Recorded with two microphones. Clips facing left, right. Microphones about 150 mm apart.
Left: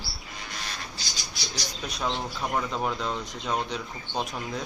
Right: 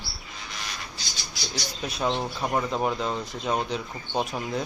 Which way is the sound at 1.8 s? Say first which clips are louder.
Right 4 dB; 5° right (ahead or behind).